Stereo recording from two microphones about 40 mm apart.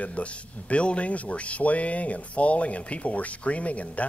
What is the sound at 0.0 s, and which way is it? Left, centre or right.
Speech, left.